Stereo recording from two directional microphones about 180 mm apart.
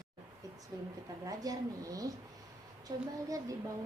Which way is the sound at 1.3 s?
20° right (ahead or behind).